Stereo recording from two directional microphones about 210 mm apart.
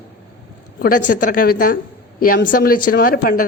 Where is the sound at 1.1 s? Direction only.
40° left (ahead or behind).